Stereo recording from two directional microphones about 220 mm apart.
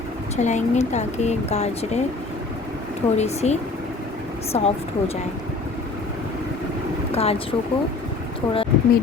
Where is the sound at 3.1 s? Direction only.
30° left (ahead or behind).